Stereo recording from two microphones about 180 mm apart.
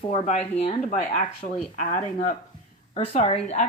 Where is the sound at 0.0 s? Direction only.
35° left (ahead or behind).